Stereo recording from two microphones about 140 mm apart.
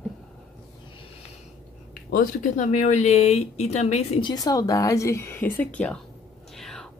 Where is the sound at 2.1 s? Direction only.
65° left (ahead or behind).